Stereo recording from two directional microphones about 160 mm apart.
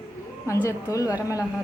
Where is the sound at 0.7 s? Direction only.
20° left (ahead or behind).